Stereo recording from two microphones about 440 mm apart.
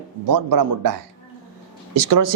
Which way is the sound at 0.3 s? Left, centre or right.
Right.